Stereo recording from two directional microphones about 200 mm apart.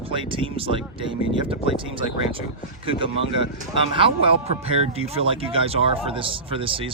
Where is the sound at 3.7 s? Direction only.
25° right (ahead or behind).